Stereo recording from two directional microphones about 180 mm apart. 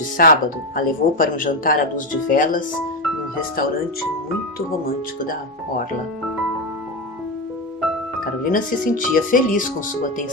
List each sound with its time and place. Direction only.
0.2 s speech: 55° left (ahead or behind)
5.2 s speech: 50° left (ahead or behind)
8.5 s speech: 50° left (ahead or behind)